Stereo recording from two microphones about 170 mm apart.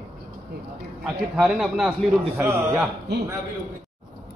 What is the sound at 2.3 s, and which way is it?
Speech, 15° right (ahead or behind).